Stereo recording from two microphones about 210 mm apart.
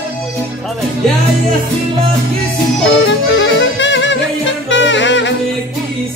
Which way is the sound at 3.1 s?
60° left (ahead or behind).